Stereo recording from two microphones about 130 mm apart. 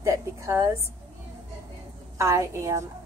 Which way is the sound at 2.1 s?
25° right (ahead or behind).